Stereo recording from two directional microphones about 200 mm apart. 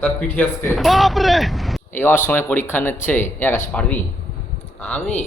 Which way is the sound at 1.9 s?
10° left (ahead or behind).